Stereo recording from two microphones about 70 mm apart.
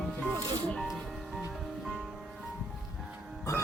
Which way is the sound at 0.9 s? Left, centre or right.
Centre.